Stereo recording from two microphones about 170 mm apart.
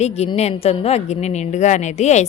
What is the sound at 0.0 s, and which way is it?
A woman's voice, 40° left (ahead or behind).